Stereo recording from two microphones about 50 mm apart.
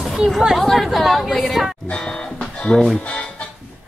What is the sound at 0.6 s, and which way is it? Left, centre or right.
Speech, centre.